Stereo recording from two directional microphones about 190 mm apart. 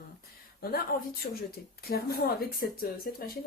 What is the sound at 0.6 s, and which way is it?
Speech, 55° left (ahead or behind).